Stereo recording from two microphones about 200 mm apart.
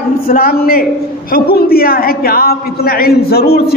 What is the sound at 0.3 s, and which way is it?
A woman's voice, 50° left (ahead or behind).